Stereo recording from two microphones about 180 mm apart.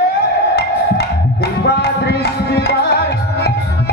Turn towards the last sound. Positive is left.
turn(degrees=60)  # may be behind; listen again after turning